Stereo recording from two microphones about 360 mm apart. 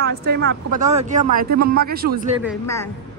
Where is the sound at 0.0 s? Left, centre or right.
Right.